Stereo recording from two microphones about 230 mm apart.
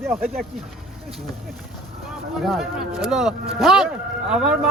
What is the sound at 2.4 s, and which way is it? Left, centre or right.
Speech, centre.